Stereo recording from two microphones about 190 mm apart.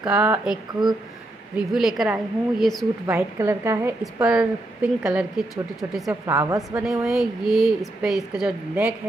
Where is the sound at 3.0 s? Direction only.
15° right (ahead or behind).